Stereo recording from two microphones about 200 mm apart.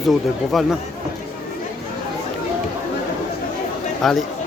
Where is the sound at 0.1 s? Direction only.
Centre (ahead or behind).